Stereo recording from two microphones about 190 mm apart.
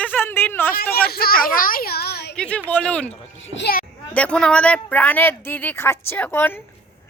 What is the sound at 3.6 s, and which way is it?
Speech, 55° left (ahead or behind).